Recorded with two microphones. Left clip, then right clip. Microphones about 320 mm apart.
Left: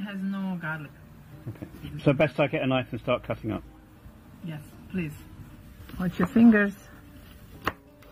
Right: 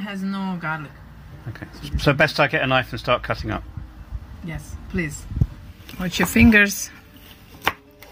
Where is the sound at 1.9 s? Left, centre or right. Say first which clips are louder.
Right 6 dB; centre.